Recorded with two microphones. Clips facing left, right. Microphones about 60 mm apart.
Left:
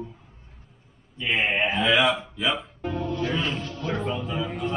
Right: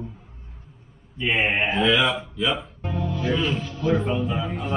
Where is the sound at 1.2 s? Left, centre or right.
Centre.